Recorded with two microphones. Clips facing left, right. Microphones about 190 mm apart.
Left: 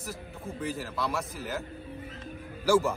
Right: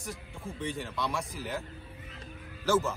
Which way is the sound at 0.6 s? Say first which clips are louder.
Left 2 dB; 5° left (ahead or behind).